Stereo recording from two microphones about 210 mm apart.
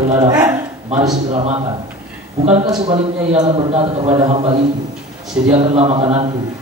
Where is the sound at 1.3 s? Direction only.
30° right (ahead or behind).